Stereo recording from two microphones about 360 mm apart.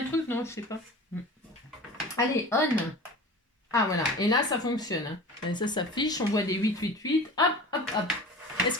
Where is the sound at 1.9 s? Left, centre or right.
Centre.